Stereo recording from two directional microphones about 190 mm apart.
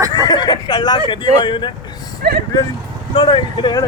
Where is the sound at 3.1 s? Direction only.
25° left (ahead or behind).